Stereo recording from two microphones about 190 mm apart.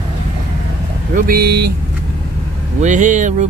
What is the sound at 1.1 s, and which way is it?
Speech, 55° right (ahead or behind).